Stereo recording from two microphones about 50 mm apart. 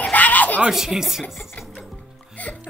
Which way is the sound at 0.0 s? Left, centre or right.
Left.